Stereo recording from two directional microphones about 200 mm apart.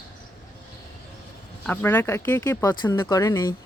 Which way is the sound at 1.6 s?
10° left (ahead or behind).